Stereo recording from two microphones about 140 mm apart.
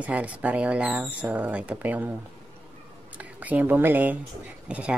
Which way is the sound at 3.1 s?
10° right (ahead or behind).